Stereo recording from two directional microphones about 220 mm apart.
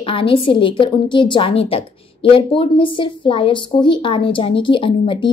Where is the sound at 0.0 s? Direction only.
25° left (ahead or behind).